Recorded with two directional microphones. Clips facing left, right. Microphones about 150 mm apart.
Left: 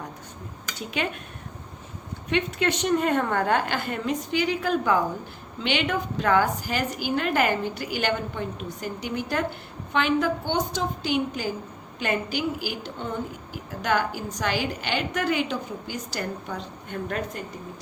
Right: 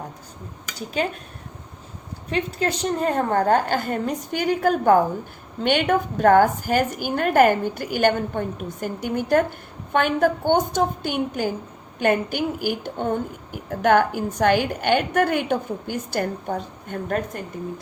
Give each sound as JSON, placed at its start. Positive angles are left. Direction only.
{"t": 0.8, "sound": "a woman's voice", "side_deg": -35}
{"t": 2.3, "sound": "a woman's voice", "side_deg": -35}